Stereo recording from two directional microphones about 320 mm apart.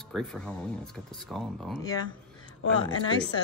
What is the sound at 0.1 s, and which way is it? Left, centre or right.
A woman's voice, centre.